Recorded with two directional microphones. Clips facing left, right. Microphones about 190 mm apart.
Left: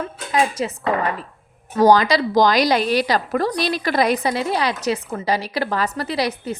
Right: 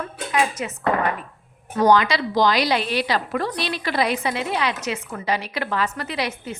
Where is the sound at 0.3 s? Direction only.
30° left (ahead or behind).